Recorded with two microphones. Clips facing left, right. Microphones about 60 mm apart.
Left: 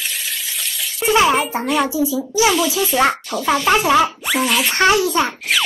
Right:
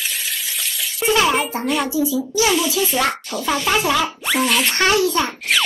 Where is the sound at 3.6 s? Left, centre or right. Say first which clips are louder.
Left 5 dB; left.